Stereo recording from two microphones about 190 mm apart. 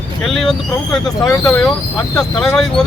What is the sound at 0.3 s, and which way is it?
Speech, centre (ahead or behind).